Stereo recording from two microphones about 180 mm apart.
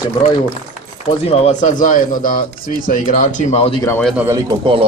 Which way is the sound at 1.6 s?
45° left (ahead or behind).